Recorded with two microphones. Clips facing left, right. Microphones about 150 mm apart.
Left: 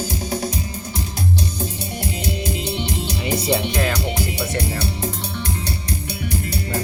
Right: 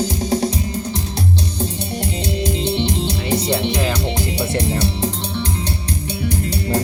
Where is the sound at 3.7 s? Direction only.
10° right (ahead or behind).